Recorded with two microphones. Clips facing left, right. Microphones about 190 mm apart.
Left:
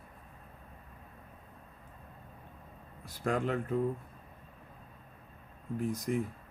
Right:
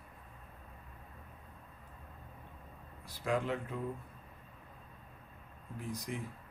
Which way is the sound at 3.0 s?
45° left (ahead or behind).